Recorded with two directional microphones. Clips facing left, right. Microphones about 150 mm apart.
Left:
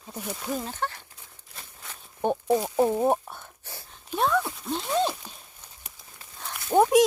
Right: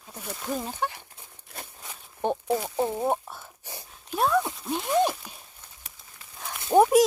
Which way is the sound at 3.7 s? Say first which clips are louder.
Right 2 dB; 15° right (ahead or behind).